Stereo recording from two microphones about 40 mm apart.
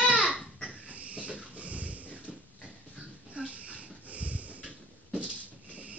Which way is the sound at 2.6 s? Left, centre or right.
Right.